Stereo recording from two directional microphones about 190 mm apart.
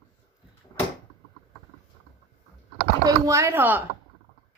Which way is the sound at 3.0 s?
15° right (ahead or behind).